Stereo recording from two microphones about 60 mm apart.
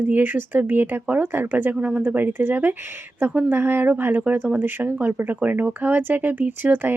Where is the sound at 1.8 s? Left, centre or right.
Centre.